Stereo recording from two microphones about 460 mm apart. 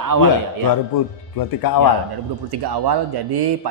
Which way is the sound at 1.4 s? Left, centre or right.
Left.